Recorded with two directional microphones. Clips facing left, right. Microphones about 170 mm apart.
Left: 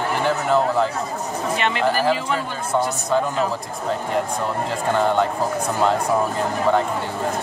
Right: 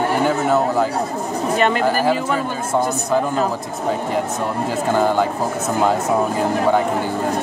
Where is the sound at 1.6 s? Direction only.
45° right (ahead or behind).